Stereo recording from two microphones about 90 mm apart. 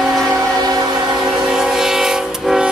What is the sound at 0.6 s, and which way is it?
Train, 45° right (ahead or behind).